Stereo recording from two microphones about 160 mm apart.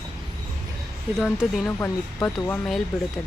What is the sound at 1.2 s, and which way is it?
Speech, 5° right (ahead or behind).